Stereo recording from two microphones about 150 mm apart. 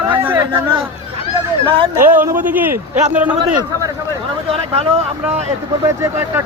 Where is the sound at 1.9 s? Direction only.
15° right (ahead or behind).